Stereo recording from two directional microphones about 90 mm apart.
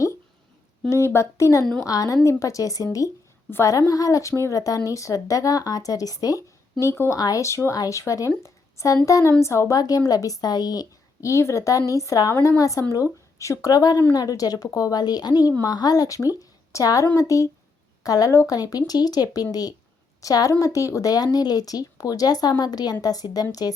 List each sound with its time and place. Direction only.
0.9 s a woman's voice: 30° left (ahead or behind)
7.2 s a woman's voice: 40° left (ahead or behind)
8.4 s a sound: 35° left (ahead or behind)
9.0 s a woman's voice: 40° left (ahead or behind)
16.4 s a sound: 40° left (ahead or behind)
17.2 s a woman's voice: 35° left (ahead or behind)